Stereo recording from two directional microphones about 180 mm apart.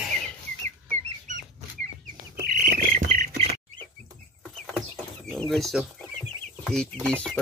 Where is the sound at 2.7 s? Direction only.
50° right (ahead or behind).